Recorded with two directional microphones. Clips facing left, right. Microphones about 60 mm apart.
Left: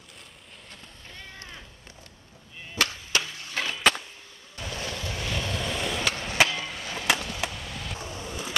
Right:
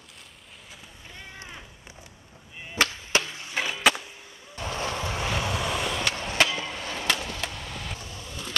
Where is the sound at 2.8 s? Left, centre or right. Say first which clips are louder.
Right 2 dB; right.